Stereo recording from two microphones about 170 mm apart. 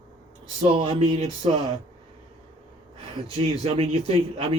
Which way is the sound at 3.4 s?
35° right (ahead or behind).